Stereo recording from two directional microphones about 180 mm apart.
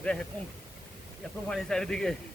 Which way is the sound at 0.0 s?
5° left (ahead or behind).